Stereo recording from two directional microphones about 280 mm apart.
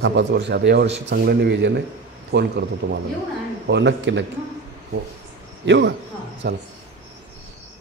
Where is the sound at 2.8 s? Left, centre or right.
Right.